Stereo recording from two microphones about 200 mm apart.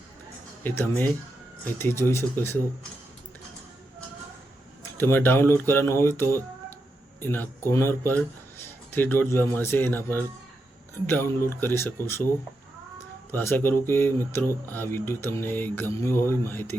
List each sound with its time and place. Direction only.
0.6 s speech: 10° left (ahead or behind)
4.9 s speech: 10° left (ahead or behind)
11.0 s speech: 10° left (ahead or behind)
13.3 s speech: 10° left (ahead or behind)